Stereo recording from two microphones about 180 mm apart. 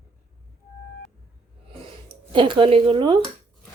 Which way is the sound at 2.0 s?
25° right (ahead or behind).